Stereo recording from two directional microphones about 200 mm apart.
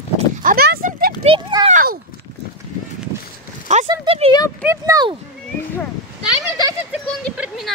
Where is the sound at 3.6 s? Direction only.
35° right (ahead or behind).